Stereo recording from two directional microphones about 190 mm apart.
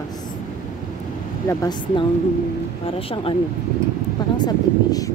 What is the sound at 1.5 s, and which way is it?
Speech, 20° left (ahead or behind).